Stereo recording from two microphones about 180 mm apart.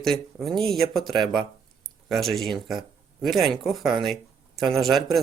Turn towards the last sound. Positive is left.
turn(degrees=0)  # may be behind; listen again after turning